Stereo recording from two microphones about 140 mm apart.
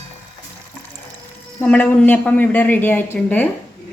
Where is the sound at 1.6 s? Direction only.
10° left (ahead or behind).